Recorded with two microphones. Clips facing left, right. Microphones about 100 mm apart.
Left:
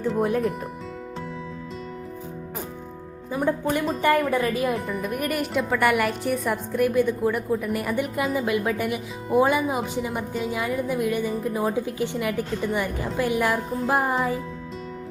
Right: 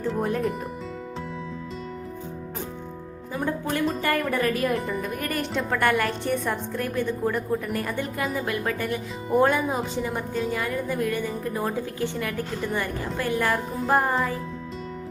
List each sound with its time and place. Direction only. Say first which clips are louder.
0.0 s speech: left 3 dB; 5° left (ahead or behind)
3.3 s a woman's voice: left 3 dB; 15° left (ahead or behind)
4.7 s speech: right 1 dB; centre (ahead or behind)
5.0 s a woman's voice: left 3 dB; 15° left (ahead or behind)
13.8 s speech: right 1 dB; 5° left (ahead or behind)